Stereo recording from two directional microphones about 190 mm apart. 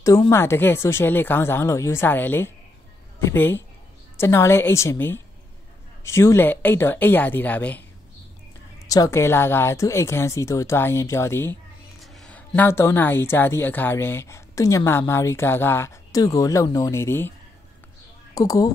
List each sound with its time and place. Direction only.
0.0 s a woman's voice: 15° left (ahead or behind)
8.8 s a woman's voice: 20° left (ahead or behind)
12.0 s a woman's voice: centre (ahead or behind)
18.3 s speech: 20° left (ahead or behind)